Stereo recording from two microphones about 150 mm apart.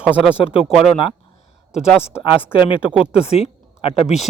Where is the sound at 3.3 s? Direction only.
40° left (ahead or behind).